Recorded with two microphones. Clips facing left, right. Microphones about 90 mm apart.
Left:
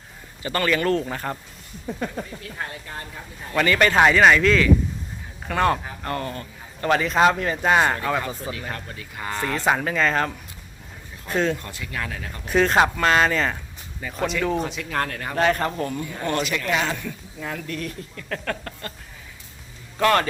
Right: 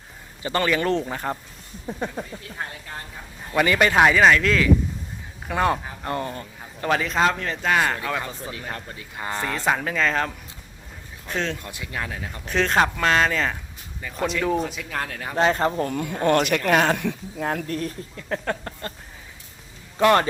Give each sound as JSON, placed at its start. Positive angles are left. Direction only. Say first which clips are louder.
{"t": 0.4, "sound": "speech", "louder": "even", "side_deg": -20}
{"t": 3.5, "sound": "speech", "louder": "even", "side_deg": -10}
{"t": 6.8, "sound": "speech", "louder": "left 3 dB", "side_deg": 0}
{"t": 7.9, "sound": "speech", "louder": "left 3 dB", "side_deg": 0}
{"t": 8.7, "sound": "speech", "louder": "even", "side_deg": -25}
{"t": 9.4, "sound": "speech", "louder": "left 2 dB", "side_deg": 0}
{"t": 11.6, "sound": "speech", "louder": "even", "side_deg": -20}
{"t": 12.5, "sound": "speech", "louder": "left 2 dB", "side_deg": 5}
{"t": 15.4, "sound": "speech", "louder": "right 1 dB", "side_deg": -25}
{"t": 16.2, "sound": "speech", "louder": "right 6 dB", "side_deg": -55}
{"t": 17.4, "sound": "speech", "louder": "right 5 dB", "side_deg": -50}
{"t": 17.7, "sound": "speech", "louder": "right 3 dB", "side_deg": -35}
{"t": 18.2, "sound": "speech", "louder": "right 2 dB", "side_deg": -20}
{"t": 20.0, "sound": "speech", "louder": "right 2 dB", "side_deg": -20}